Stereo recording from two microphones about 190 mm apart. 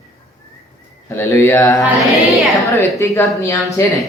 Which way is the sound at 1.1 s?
10° left (ahead or behind).